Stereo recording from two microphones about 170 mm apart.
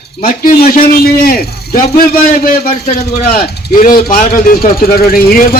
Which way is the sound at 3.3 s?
60° left (ahead or behind).